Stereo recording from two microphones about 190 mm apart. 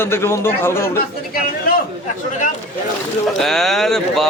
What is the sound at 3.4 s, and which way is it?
Speech, centre (ahead or behind).